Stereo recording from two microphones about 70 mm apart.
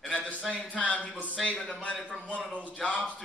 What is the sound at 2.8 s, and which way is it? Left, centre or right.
Speech, centre.